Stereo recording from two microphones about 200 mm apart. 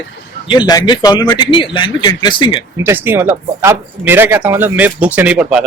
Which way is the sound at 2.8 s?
10° right (ahead or behind).